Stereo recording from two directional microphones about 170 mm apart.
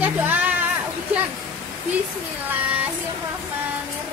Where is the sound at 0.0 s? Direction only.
10° right (ahead or behind).